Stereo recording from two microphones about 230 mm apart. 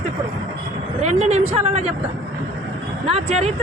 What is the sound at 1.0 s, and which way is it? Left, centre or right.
Speech, right.